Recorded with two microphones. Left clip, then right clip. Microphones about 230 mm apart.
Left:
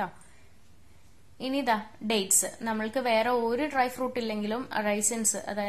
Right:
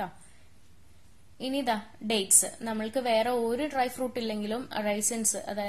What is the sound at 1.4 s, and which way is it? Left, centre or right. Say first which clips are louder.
A woman's voice: left 2 dB; centre.